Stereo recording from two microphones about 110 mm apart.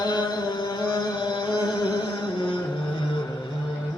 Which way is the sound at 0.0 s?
40° left (ahead or behind).